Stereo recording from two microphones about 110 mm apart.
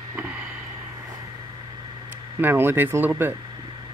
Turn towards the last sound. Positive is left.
turn(degrees=-20)  # may be behind; listen again after turning